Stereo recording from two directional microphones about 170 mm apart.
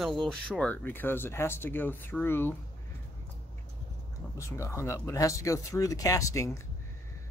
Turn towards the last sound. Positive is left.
turn(degrees=20)  # may be behind; listen again after turning